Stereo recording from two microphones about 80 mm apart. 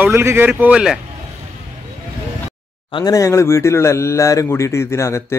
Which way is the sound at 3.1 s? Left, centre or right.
Left.